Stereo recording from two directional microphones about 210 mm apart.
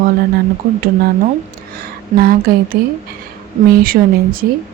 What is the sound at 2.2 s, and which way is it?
Speech, 45° right (ahead or behind).